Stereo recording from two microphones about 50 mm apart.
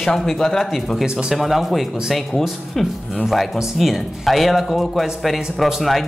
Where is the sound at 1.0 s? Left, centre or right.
Centre.